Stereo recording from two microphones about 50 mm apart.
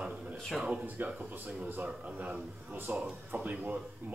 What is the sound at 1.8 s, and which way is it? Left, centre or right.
A man's voice, right.